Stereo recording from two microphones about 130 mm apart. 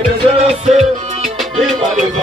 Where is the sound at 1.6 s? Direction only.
5° left (ahead or behind).